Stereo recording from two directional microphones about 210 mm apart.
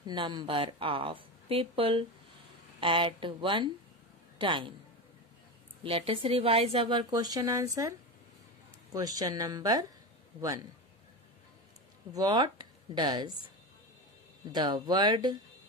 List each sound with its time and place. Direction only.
0.0 s speech: 20° right (ahead or behind)
5.9 s speech: 25° right (ahead or behind)
8.9 s a woman's voice: 15° right (ahead or behind)
12.1 s speech: 20° right (ahead or behind)
14.5 s speech: 20° right (ahead or behind)